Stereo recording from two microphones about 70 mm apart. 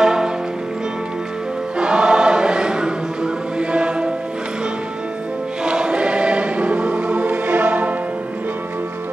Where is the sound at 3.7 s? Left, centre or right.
Centre.